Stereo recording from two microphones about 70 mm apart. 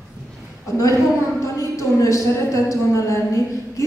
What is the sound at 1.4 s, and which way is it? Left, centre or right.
A woman's voice, left.